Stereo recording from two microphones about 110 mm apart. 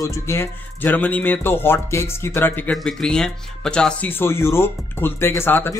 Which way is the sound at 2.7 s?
5° left (ahead or behind).